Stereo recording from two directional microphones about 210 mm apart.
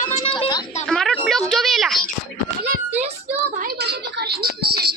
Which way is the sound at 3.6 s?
50° right (ahead or behind).